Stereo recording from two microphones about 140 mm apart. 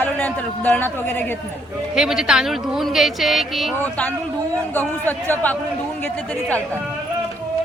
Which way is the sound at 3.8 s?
10° left (ahead or behind).